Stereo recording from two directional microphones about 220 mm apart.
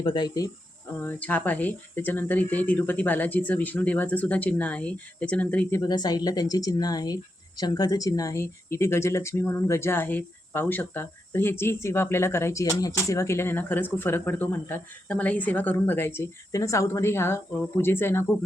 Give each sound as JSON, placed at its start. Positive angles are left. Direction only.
{"t": 0.0, "sound": "speech", "side_deg": 20}
{"t": 1.0, "sound": "speech", "side_deg": 5}
{"t": 5.8, "sound": "speech", "side_deg": 20}